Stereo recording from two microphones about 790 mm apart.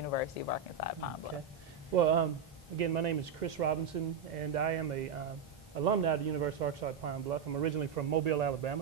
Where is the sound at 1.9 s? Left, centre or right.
Right.